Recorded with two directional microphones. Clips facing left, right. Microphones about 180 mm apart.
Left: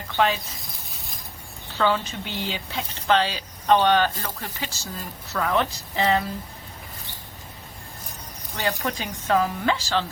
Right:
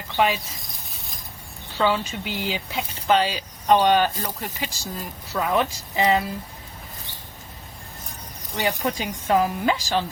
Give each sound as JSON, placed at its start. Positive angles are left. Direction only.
{"t": 0.2, "sound": "speech", "side_deg": -15}
{"t": 1.8, "sound": "speech", "side_deg": -10}
{"t": 8.5, "sound": "speech", "side_deg": -15}